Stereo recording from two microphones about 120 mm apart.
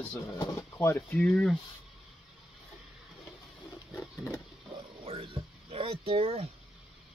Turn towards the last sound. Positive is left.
turn(degrees=-55)  # may be behind; listen again after turning